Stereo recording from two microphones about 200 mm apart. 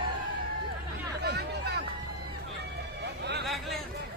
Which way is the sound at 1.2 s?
55° right (ahead or behind).